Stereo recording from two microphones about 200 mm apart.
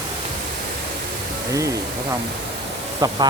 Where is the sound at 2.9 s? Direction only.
20° right (ahead or behind).